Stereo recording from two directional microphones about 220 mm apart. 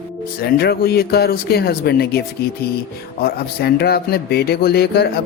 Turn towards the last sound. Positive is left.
turn(degrees=45)  # may be behind; listen again after turning